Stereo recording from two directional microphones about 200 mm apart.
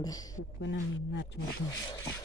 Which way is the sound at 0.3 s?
65° left (ahead or behind).